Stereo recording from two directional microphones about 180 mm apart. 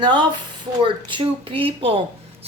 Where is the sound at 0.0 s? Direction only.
25° right (ahead or behind).